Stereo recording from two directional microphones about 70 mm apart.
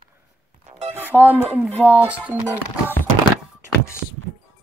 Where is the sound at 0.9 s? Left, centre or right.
Right.